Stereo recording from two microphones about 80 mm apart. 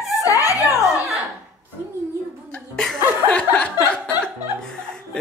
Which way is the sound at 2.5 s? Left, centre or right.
Centre.